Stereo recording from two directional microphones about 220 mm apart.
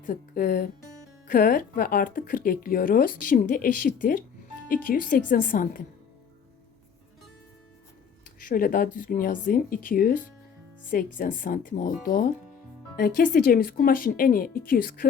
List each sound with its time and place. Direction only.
0.0 s speech: 40° left (ahead or behind)
8.4 s speech: 40° left (ahead or behind)